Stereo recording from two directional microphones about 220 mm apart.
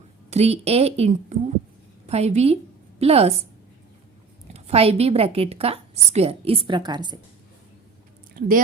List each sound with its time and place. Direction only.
0.3 s a woman's voice: 30° right (ahead or behind)
4.5 s a woman's voice: 30° right (ahead or behind)
8.4 s a woman's voice: 40° right (ahead or behind)